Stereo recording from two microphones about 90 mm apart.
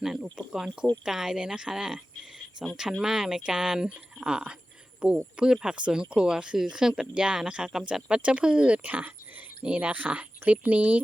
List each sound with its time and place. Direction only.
0.0 s speech: 5° right (ahead or behind)